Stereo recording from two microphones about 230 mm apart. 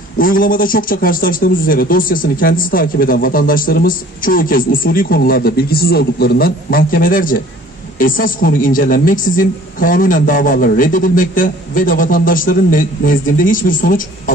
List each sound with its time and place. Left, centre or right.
0.2 s a man's voice: left